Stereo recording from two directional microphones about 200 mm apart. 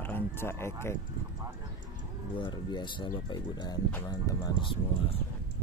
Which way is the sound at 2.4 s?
20° left (ahead or behind).